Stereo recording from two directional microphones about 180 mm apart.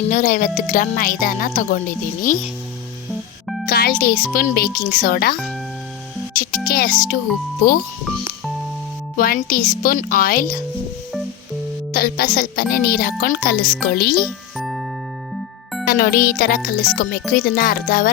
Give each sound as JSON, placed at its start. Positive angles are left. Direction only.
{"t": 0.1, "sound": "speech", "side_deg": 50}
{"t": 3.7, "sound": "music", "side_deg": 60}
{"t": 4.4, "sound": "a child's voice", "side_deg": 55}
{"t": 6.3, "sound": "music", "side_deg": 50}
{"t": 6.7, "sound": "speech", "side_deg": 55}
{"t": 9.1, "sound": "speech", "side_deg": 50}
{"t": 11.9, "sound": "a child's voice", "side_deg": 60}
{"t": 14.6, "sound": "music", "side_deg": 0}
{"t": 15.9, "sound": "a child's voice", "side_deg": 55}